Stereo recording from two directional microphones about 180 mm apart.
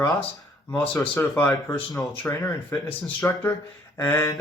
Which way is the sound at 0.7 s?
10° left (ahead or behind).